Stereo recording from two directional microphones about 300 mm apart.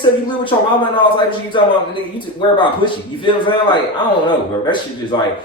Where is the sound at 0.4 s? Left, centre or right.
Centre.